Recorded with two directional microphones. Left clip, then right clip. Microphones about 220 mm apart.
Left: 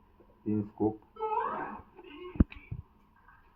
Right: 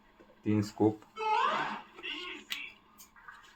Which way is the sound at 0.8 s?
45° right (ahead or behind).